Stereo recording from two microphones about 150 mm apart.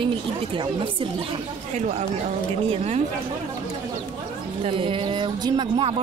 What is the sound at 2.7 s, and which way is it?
Speech, 45° right (ahead or behind).